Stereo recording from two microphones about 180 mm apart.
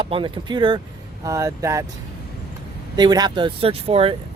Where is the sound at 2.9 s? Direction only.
25° right (ahead or behind).